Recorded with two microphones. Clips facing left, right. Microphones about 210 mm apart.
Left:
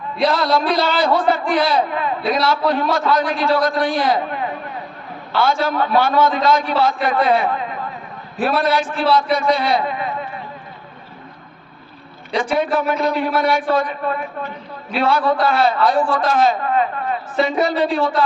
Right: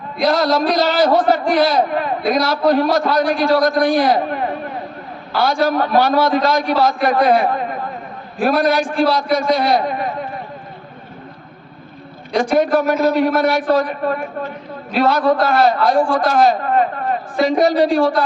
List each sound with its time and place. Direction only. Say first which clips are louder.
0.3 s a man's voice: right 3 dB; 40° right (ahead or behind)
4.3 s a sound: right 3 dB; 45° right (ahead or behind)
5.4 s a man's voice: right 2 dB; 40° right (ahead or behind)
12.4 s a man's voice: right 4 dB; 40° right (ahead or behind)
16.0 s a man's voice: right 2 dB; 15° right (ahead or behind)
16.3 s a man's voice: right 1 dB; 45° right (ahead or behind)